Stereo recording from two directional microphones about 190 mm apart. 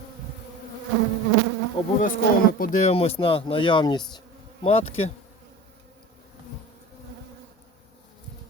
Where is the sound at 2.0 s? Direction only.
45° left (ahead or behind); by 4.2 s 20° left (ahead or behind).